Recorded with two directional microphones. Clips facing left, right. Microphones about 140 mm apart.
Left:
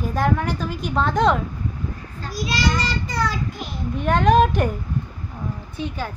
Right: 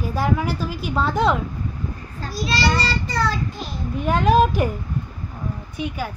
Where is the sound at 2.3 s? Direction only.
15° left (ahead or behind).